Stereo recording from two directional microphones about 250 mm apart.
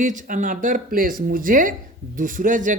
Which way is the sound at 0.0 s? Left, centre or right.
Right.